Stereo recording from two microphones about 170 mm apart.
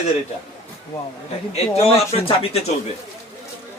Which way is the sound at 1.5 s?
35° left (ahead or behind).